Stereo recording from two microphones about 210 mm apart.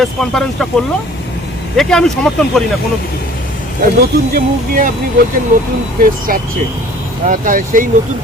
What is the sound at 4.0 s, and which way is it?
Speech, 45° right (ahead or behind).